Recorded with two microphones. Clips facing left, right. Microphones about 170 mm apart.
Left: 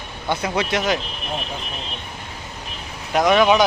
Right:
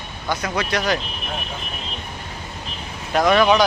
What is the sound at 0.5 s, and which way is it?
Speech, 20° left (ahead or behind).